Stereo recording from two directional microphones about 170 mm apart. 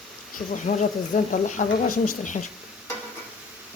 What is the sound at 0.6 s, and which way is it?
Speech, 45° left (ahead or behind).